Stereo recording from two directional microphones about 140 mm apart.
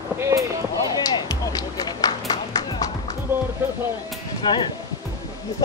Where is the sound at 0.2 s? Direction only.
20° right (ahead or behind).